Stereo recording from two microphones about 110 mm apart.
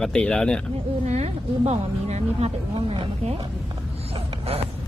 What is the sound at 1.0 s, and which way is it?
A woman's voice, 85° right.